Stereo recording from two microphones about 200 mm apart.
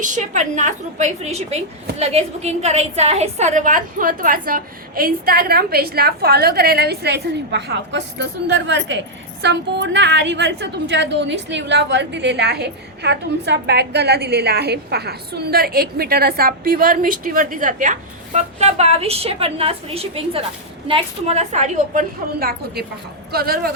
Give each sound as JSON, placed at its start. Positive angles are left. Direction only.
{"t": 0.0, "sound": "a woman's voice", "side_deg": -40}